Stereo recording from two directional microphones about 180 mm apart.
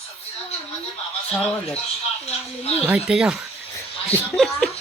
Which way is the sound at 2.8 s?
5° right (ahead or behind).